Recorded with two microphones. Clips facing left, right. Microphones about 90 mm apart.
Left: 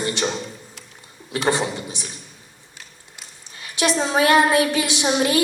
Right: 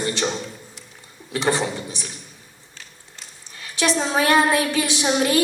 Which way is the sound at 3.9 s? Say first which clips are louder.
Left 2 dB; 25° left (ahead or behind).